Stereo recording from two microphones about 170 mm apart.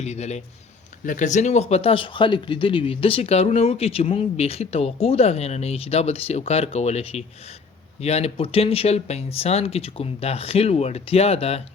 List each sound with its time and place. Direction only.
0.0 s speech: 40° left (ahead or behind)